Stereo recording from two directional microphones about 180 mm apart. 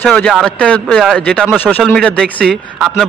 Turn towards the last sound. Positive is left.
turn(degrees=-5)  # may be behind; listen again after turning